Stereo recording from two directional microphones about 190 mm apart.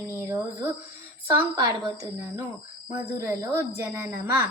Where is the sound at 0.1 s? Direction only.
15° right (ahead or behind).